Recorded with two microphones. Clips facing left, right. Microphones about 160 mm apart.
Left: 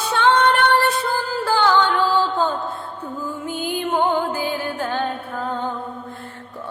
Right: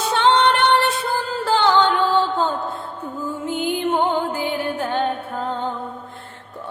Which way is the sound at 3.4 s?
20° right (ahead or behind).